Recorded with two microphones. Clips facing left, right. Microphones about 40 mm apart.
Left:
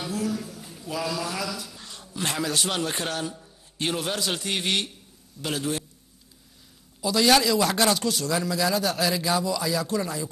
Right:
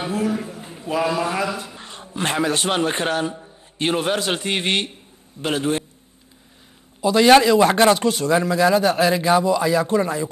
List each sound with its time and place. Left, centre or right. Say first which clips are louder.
0.0 s a man's voice: right 6 dB; right
7.0 s speech: right 8 dB; right